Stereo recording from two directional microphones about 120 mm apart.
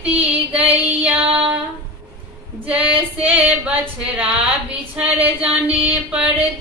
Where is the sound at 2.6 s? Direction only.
10° right (ahead or behind).